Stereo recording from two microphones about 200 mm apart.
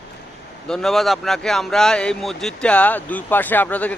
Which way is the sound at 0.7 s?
Centre (ahead or behind).